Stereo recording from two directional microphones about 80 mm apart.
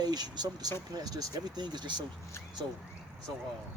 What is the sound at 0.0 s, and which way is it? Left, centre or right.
Speech, right.